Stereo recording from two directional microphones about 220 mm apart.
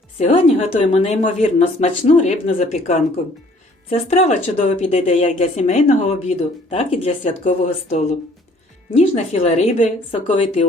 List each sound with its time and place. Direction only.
0.2 s speech: 30° left (ahead or behind)